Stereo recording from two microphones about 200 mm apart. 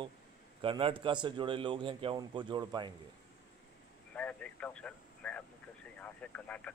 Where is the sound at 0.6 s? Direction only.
25° right (ahead or behind).